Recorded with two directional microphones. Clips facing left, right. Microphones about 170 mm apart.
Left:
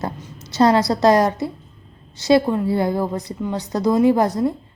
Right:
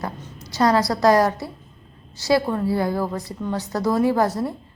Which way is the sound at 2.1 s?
20° left (ahead or behind).